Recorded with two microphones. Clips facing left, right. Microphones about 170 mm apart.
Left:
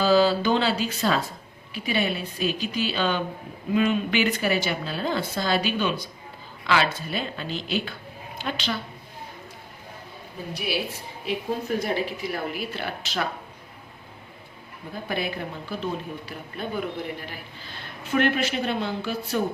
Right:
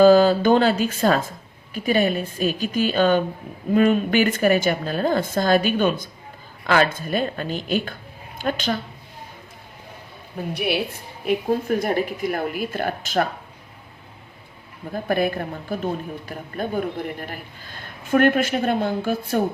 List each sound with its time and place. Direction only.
0.0 s a man's voice: 50° right (ahead or behind)
10.5 s a woman's voice: 60° right (ahead or behind)
14.9 s a man's voice: 50° right (ahead or behind)